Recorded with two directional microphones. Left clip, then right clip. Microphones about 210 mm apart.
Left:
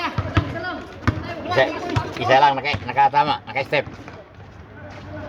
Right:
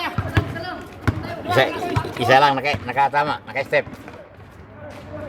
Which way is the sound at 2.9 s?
Centre (ahead or behind).